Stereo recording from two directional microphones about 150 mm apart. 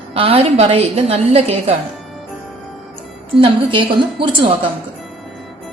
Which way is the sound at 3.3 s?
35° right (ahead or behind).